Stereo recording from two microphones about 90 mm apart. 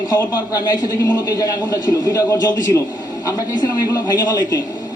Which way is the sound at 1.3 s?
35° left (ahead or behind).